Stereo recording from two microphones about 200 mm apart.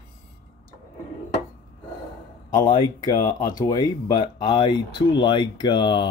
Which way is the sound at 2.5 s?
25° left (ahead or behind).